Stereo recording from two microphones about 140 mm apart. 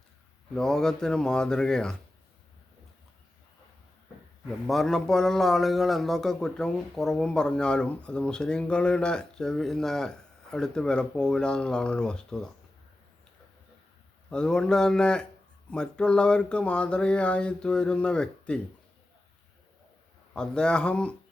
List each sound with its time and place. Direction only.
0.5 s a man's voice: 5° left (ahead or behind)
4.6 s a man's voice: centre (ahead or behind)
14.3 s a man's voice: 5° left (ahead or behind)
20.3 s speech: 5° left (ahead or behind)